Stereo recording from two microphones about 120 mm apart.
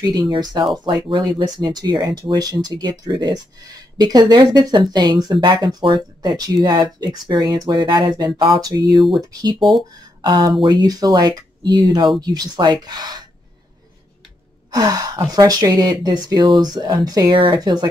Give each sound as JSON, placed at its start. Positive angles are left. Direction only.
{"t": 0.0, "sound": "speech", "side_deg": -30}
{"t": 9.6, "sound": "speech", "side_deg": 0}
{"t": 10.2, "sound": "speech", "side_deg": -40}
{"t": 14.7, "sound": "speech", "side_deg": -30}